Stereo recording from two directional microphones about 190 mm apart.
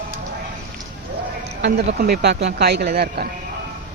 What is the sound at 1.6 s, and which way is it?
Speech, 55° right (ahead or behind).